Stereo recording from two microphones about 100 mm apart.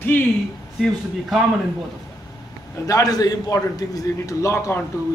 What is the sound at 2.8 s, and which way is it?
A man's voice, 35° left (ahead or behind).